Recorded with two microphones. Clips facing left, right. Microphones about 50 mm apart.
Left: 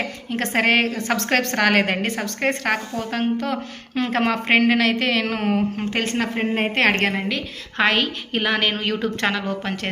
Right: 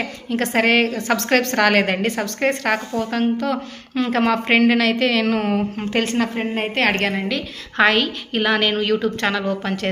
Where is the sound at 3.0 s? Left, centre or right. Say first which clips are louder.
Right 3 dB; left.